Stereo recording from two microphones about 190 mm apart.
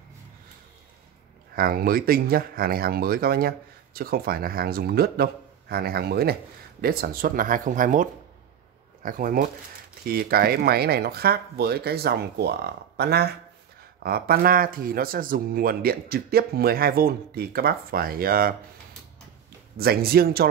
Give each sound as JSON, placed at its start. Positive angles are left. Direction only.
{"t": 1.5, "sound": "speech", "side_deg": -50}
{"t": 19.8, "sound": "speech", "side_deg": -55}